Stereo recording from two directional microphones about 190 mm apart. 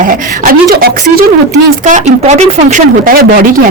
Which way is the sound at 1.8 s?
40° right (ahead or behind).